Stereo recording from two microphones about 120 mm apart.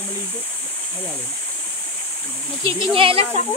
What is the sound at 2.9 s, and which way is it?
Speech, 45° right (ahead or behind).